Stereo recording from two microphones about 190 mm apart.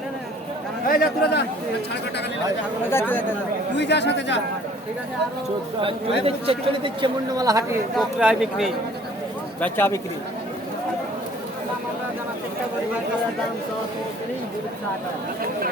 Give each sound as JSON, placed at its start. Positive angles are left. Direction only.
{"t": 0.9, "sound": "speech", "side_deg": 55}
{"t": 2.9, "sound": "speech", "side_deg": 10}
{"t": 3.8, "sound": "speech", "side_deg": 65}
{"t": 5.8, "sound": "speech", "side_deg": -30}
{"t": 7.9, "sound": "speech", "side_deg": -5}
{"t": 9.6, "sound": "speech", "side_deg": 10}